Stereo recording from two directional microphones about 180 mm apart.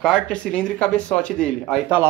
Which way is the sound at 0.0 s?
5° left (ahead or behind).